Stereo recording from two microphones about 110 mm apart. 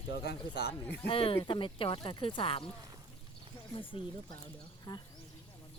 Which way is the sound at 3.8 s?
50° left (ahead or behind).